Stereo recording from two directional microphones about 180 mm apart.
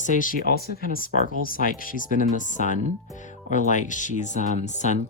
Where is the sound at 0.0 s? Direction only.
45° left (ahead or behind).